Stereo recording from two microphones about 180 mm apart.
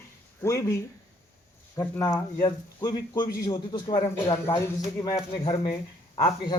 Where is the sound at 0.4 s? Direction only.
15° left (ahead or behind).